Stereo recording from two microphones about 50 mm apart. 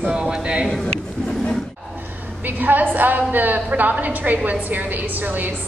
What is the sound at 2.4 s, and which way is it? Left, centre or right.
A woman's voice, right.